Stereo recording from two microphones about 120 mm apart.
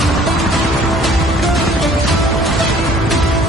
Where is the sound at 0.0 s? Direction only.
Centre (ahead or behind).